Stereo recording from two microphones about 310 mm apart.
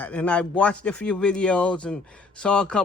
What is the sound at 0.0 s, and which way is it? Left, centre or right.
A man's voice, centre.